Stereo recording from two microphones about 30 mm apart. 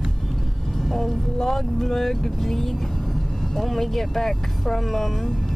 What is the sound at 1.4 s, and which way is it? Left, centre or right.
Speech, centre.